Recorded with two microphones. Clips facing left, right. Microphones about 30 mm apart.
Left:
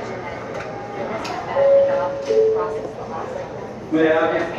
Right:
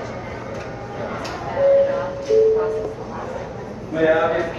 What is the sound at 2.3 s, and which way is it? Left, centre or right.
Music, left.